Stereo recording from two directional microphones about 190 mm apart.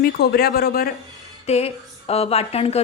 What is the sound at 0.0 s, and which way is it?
Speech, 55° left (ahead or behind).